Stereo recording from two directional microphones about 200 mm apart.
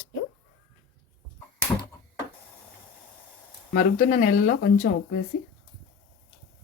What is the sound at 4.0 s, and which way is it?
Speech, 40° left (ahead or behind).